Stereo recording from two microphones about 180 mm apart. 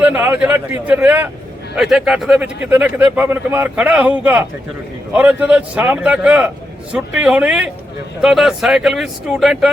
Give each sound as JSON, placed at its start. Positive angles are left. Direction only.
{"t": 0.0, "sound": "a man's voice", "side_deg": -10}